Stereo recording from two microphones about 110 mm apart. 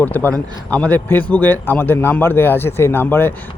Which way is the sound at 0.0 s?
15° left (ahead or behind).